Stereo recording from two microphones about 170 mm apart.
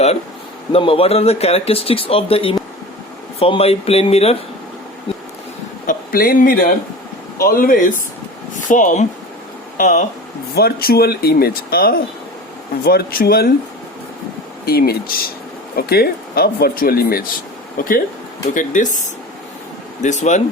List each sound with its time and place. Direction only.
0.7 s speech: 35° left (ahead or behind)
5.8 s speech: 55° left (ahead or behind)
10.5 s speech: 65° left (ahead or behind)
14.6 s speech: 65° left (ahead or behind); by 20.4 s 45° left (ahead or behind)